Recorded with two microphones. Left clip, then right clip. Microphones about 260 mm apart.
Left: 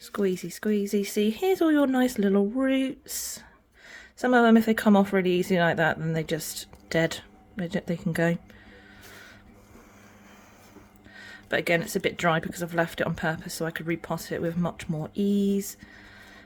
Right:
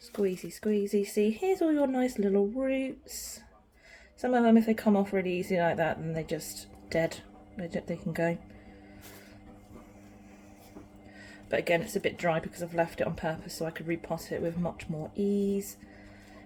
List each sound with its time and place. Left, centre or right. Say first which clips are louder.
0.2 s speech: left 3 dB; left
11.2 s speech: left 3 dB; left